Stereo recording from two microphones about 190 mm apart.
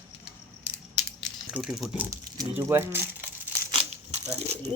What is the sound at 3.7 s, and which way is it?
Crumpling, 30° right (ahead or behind).